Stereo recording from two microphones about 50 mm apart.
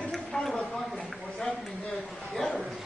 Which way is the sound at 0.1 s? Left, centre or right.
Centre.